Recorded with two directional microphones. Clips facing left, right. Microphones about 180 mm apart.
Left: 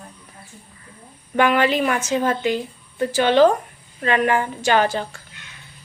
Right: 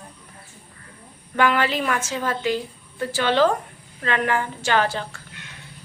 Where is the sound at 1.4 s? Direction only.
20° left (ahead or behind).